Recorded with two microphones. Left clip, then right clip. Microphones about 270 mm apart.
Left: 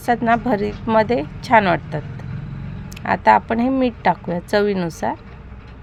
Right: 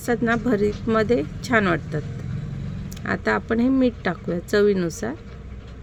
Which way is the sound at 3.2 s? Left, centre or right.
Centre.